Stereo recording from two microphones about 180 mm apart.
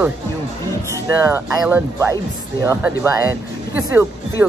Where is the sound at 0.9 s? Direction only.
15° right (ahead or behind).